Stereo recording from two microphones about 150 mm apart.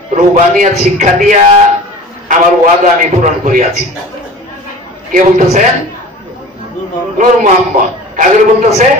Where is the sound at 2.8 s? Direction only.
60° right (ahead or behind).